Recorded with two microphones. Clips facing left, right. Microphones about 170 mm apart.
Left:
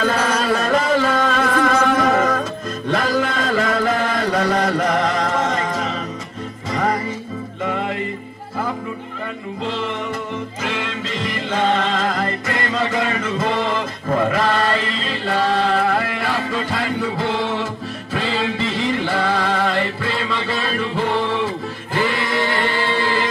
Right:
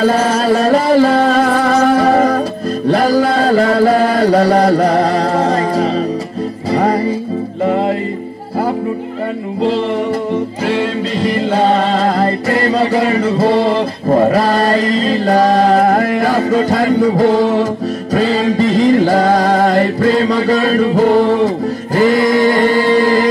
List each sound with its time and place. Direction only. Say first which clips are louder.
0.0 s music: right 7 dB; 35° right (ahead or behind)
2.9 s mantra: right 8 dB; 35° right (ahead or behind)
6.7 s music: right 7 dB; 35° right (ahead or behind)
10.3 s music: right 10 dB; 35° right (ahead or behind)
21.9 s chant: right 10 dB; 40° right (ahead or behind)